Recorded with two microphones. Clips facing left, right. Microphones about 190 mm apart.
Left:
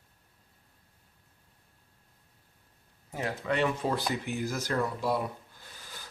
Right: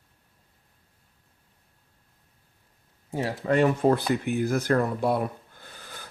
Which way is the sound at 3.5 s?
45° right (ahead or behind).